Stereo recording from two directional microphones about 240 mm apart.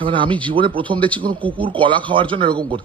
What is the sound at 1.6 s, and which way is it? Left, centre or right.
A man's voice, right.